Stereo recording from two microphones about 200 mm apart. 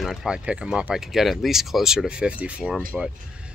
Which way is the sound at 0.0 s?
Centre (ahead or behind).